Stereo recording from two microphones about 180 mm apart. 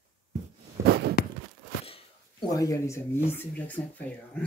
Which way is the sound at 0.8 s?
65° right (ahead or behind).